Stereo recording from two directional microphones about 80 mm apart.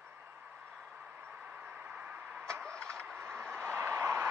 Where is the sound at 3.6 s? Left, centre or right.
Right.